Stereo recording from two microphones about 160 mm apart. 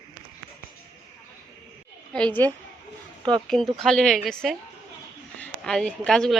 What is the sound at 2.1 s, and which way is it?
A woman's voice, 10° left (ahead or behind).